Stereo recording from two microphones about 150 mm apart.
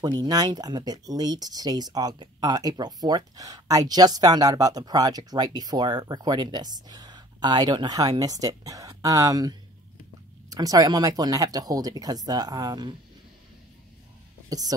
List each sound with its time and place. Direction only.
0.0 s speech: 25° right (ahead or behind)
14.5 s speech: 25° right (ahead or behind)